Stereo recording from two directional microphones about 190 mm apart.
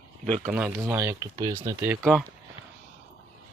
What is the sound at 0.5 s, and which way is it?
Speech, 10° right (ahead or behind).